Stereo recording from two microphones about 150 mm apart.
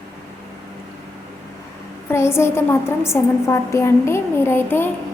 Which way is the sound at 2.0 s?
15° left (ahead or behind).